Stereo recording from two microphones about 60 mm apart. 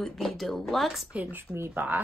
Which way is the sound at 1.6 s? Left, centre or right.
Right.